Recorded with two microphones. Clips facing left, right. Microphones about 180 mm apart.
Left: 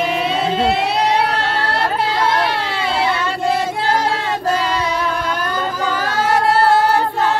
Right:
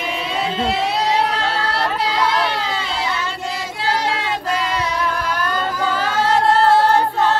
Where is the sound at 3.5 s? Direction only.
60° left (ahead or behind).